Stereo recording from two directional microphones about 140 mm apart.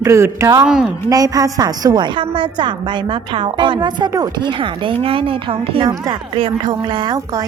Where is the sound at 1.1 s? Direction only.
25° right (ahead or behind).